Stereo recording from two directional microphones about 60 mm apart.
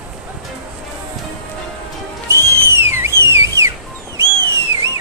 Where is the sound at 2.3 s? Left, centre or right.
Right.